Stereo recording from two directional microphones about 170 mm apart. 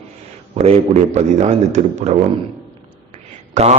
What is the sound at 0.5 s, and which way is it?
Mantra, 40° right (ahead or behind).